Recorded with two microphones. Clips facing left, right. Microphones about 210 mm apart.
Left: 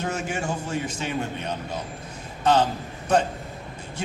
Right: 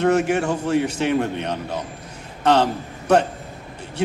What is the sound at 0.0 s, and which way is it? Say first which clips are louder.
A man's voice: right 10 dB; 65° right (ahead or behind).